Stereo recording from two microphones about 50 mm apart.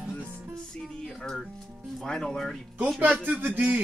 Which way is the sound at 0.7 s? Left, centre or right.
Centre.